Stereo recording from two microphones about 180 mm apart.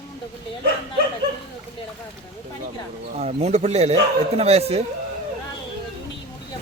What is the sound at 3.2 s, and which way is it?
Speech, 35° right (ahead or behind).